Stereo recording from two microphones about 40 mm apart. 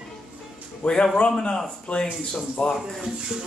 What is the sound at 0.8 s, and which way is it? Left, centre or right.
Speech, left.